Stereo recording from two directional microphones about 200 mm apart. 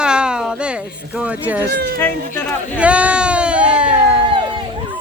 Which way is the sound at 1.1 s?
5° right (ahead or behind).